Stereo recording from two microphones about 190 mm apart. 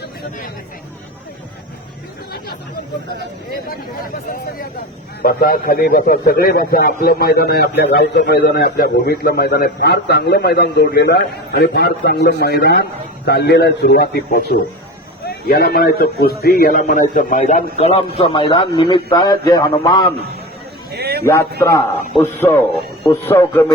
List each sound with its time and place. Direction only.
5.2 s a man's voice: 50° left (ahead or behind); by 20.1 s 20° left (ahead or behind)
20.9 s a sound: 55° right (ahead or behind)
21.6 s a man's voice: 15° left (ahead or behind)